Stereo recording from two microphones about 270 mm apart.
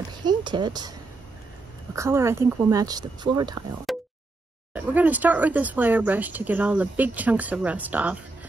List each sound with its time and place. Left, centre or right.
0.1 s speech: centre
2.0 s speech: centre
3.9 s a sound: centre
4.7 s speech: centre